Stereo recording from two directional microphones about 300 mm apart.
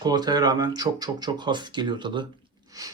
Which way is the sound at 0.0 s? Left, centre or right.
Centre.